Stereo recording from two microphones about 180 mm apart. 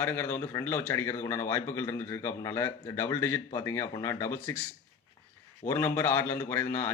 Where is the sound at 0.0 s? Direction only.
10° left (ahead or behind).